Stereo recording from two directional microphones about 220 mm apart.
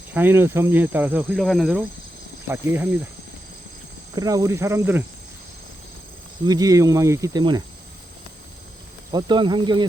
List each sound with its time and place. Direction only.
0.1 s speech: 10° right (ahead or behind)
4.1 s speech: 15° right (ahead or behind)
6.4 s speech: 15° right (ahead or behind)
9.1 s speech: 20° right (ahead or behind)